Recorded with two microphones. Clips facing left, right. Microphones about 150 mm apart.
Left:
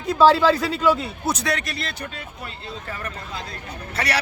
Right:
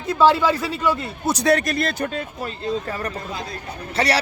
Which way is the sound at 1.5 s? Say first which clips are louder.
Right 8 dB; 45° right (ahead or behind).